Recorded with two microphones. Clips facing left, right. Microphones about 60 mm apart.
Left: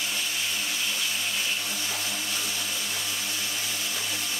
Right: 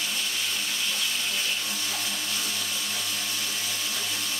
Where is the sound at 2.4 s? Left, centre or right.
Centre.